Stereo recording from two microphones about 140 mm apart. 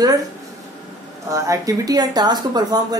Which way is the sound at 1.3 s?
25° right (ahead or behind).